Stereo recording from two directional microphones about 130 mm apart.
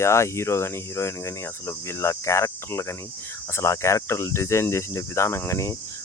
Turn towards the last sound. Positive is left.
turn(degrees=20)  # may be behind; listen again after turning